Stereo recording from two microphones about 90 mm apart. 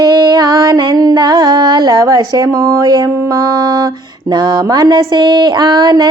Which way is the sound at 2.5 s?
35° right (ahead or behind).